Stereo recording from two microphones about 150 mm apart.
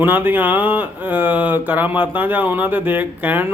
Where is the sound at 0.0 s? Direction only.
15° right (ahead or behind).